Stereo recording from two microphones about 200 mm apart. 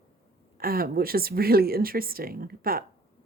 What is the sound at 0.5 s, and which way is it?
A woman's voice, 50° right (ahead or behind).